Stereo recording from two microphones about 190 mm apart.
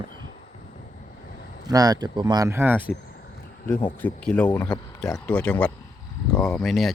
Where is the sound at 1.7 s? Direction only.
20° right (ahead or behind).